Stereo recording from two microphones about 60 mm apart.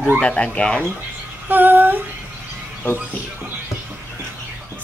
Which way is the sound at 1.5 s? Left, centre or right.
Right.